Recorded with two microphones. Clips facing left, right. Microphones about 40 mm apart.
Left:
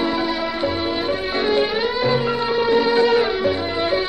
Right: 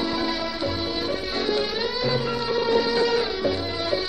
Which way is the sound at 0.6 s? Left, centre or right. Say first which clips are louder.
Left 5 dB; left.